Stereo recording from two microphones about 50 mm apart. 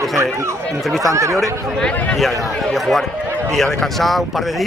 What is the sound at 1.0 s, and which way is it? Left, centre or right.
Speech, right.